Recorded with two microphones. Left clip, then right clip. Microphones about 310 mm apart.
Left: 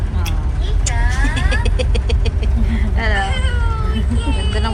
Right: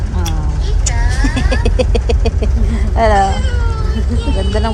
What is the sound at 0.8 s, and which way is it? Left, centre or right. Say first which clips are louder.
Vehicle: right 1 dB; centre.